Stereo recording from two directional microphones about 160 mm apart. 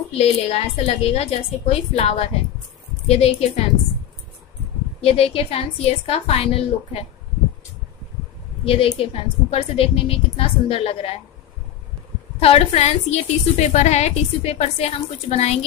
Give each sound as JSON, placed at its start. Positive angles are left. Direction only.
{"t": 0.2, "sound": "a woman's voice", "side_deg": 40}
{"t": 5.0, "sound": "a woman's voice", "side_deg": 40}
{"t": 8.6, "sound": "a woman's voice", "side_deg": 35}
{"t": 12.4, "sound": "a woman's voice", "side_deg": 40}